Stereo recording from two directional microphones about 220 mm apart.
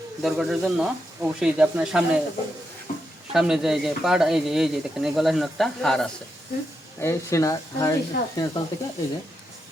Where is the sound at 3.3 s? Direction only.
Centre (ahead or behind).